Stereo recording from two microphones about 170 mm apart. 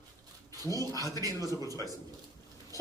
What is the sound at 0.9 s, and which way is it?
Speech, 20° left (ahead or behind).